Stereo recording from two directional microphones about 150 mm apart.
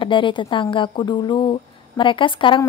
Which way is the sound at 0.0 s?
35° left (ahead or behind).